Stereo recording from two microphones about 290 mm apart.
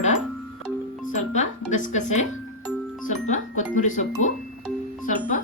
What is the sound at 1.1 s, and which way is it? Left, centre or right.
Speech, left.